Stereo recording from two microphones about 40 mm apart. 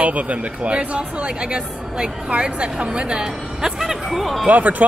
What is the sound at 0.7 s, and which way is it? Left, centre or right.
Speech, right.